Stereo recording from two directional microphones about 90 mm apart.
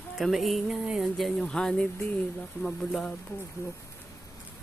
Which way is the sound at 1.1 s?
5° left (ahead or behind).